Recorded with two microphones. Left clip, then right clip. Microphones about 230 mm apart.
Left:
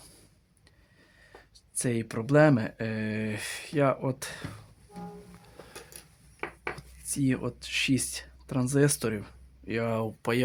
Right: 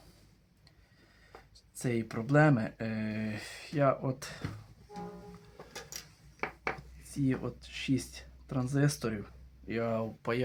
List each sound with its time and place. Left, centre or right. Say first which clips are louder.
1.5 s speech: left 3 dB; left
6.7 s speech: left 5 dB; left